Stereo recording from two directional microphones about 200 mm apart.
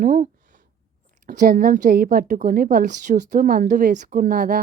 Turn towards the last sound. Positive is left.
turn(degrees=-45)  # may be behind; listen again after turning